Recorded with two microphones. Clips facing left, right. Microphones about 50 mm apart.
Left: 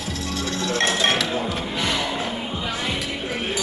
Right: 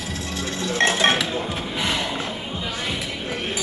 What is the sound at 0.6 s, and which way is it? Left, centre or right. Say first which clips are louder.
Music: right 2 dB; right.